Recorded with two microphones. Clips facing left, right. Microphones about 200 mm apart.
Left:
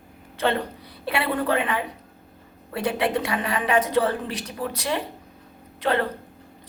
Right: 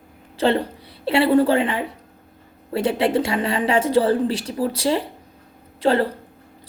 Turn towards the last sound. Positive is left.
turn(degrees=-30)  # may be behind; listen again after turning